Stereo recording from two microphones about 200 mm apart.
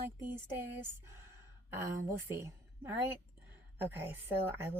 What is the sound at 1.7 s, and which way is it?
Speech, 10° right (ahead or behind).